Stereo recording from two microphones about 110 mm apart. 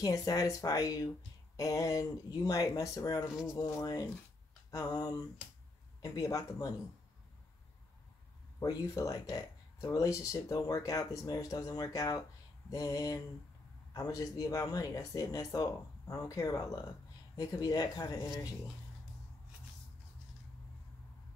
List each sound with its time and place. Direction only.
0.0 s speech: 30° left (ahead or behind)
8.5 s speech: 30° left (ahead or behind)